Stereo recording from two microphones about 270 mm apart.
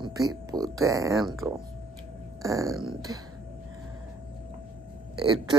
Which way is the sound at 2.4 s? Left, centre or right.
Centre.